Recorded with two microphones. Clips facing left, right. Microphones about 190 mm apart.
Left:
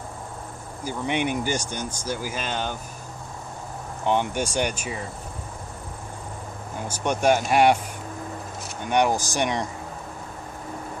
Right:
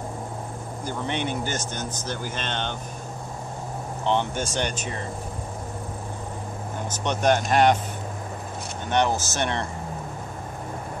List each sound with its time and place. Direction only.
0.8 s speech: 10° left (ahead or behind)
4.0 s speech: 10° left (ahead or behind)
6.9 s speech: 10° left (ahead or behind)
8.8 s speech: 10° left (ahead or behind)